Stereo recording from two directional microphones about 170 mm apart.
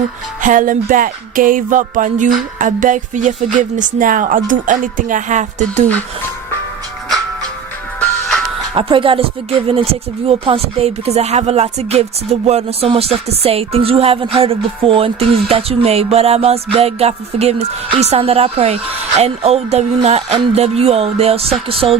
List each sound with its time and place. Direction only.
0.4 s speech: 50° right (ahead or behind)
8.7 s speech: 30° right (ahead or behind)